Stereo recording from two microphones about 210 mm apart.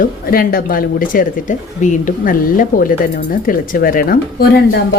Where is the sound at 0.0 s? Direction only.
45° left (ahead or behind).